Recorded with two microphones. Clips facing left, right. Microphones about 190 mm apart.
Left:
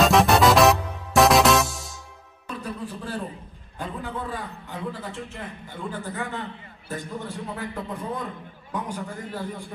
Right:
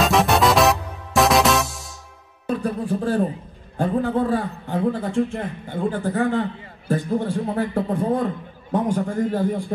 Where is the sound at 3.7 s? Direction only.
45° right (ahead or behind).